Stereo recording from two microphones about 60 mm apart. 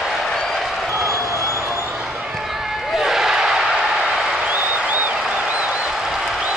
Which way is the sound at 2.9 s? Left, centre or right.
Centre.